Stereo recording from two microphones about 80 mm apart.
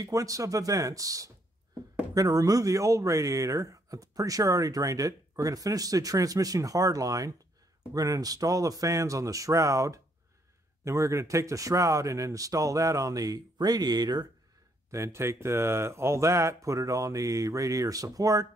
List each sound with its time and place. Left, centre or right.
0.0 s speech: right
14.9 s speech: right